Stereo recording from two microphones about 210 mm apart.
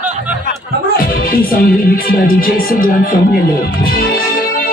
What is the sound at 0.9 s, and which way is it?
Music, 45° left (ahead or behind).